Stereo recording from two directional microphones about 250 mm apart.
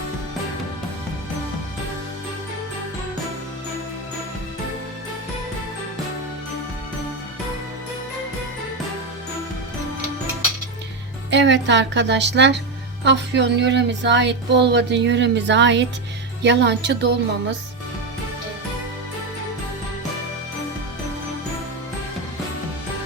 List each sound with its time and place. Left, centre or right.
11.3 s speech: right